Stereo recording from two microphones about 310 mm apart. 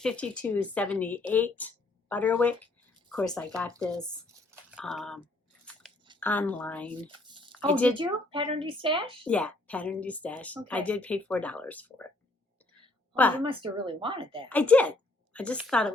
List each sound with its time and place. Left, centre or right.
0.0 s speech: centre
7.3 s a sound: centre
7.7 s speech: centre
7.9 s speech: centre
9.2 s speech: centre
13.1 s speech: centre
13.4 s speech: centre
14.5 s a woman's voice: centre